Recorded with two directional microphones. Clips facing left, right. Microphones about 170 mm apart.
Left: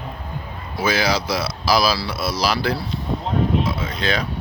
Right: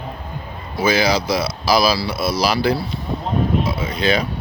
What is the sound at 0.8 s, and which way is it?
Speech, centre (ahead or behind).